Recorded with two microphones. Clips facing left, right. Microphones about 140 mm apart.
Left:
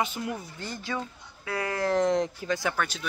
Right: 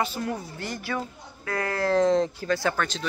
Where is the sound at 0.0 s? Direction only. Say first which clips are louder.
Right 2 dB; 20° left (ahead or behind).